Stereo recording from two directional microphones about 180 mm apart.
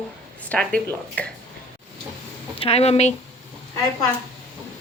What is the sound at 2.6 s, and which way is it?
Speech, 35° left (ahead or behind).